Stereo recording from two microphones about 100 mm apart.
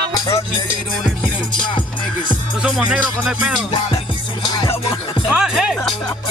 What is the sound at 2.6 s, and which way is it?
Music, 5° right (ahead or behind).